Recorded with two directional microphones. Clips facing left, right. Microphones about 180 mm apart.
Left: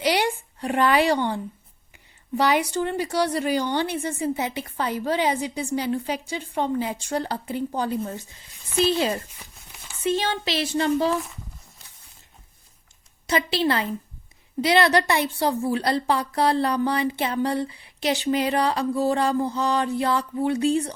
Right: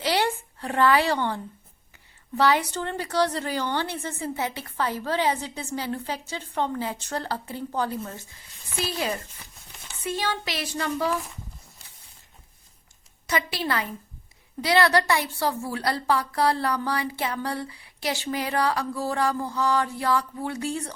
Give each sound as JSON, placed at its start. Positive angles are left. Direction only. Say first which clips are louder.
{"t": 0.0, "sound": "a sound", "louder": "left 2 dB", "side_deg": 15}
{"t": 2.4, "sound": "a woman's voice", "louder": "left 1 dB", "side_deg": 15}
{"t": 13.2, "sound": "a woman's voice", "louder": "left 5 dB", "side_deg": 25}